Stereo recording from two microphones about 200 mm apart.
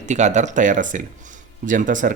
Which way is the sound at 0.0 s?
35° right (ahead or behind).